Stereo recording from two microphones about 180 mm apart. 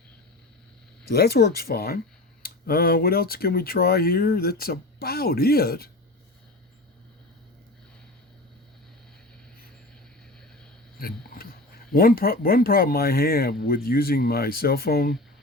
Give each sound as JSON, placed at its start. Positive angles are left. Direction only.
{"t": 1.1, "sound": "speech", "side_deg": 60}
{"t": 10.9, "sound": "speech", "side_deg": 55}